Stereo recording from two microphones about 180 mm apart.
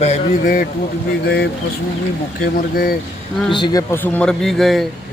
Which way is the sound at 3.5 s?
25° left (ahead or behind).